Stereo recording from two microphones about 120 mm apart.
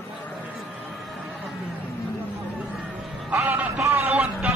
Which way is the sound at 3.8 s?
25° right (ahead or behind).